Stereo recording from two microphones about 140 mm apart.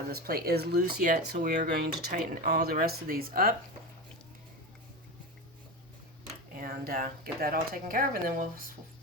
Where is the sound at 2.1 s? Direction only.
90° right.